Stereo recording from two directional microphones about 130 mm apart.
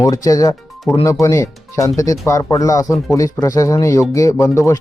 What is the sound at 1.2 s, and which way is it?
Speech, 25° left (ahead or behind).